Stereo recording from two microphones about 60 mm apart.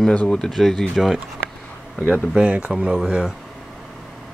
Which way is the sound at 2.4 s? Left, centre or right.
Centre.